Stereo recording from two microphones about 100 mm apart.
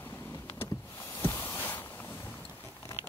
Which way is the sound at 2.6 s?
30° left (ahead or behind).